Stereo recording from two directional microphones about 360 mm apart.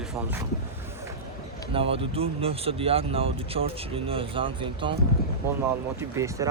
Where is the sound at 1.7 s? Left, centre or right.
Centre.